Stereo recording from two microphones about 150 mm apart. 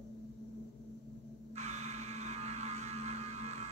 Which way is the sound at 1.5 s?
50° right (ahead or behind).